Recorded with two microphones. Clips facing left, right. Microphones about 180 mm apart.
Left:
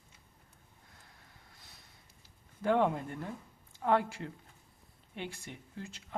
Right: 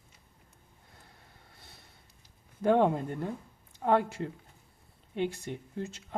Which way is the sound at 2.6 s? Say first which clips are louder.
Right 4 dB; 20° right (ahead or behind).